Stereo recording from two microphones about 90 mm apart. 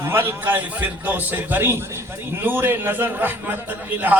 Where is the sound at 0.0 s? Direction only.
25° right (ahead or behind).